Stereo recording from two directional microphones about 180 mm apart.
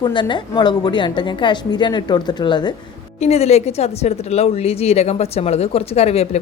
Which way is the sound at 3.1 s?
35° left (ahead or behind).